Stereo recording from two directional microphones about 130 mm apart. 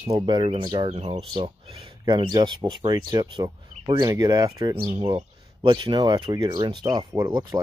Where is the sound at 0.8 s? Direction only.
55° right (ahead or behind).